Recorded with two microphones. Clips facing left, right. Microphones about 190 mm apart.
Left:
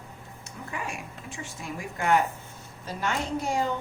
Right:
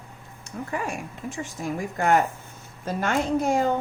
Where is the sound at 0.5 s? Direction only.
50° right (ahead or behind).